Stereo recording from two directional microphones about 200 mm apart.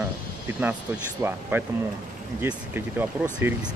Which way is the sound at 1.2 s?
10° right (ahead or behind).